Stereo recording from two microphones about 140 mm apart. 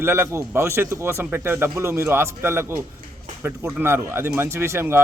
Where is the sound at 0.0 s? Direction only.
15° right (ahead or behind).